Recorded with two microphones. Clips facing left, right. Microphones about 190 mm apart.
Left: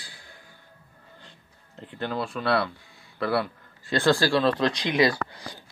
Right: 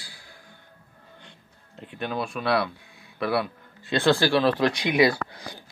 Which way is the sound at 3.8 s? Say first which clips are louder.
Right 1 dB; 20° right (ahead or behind).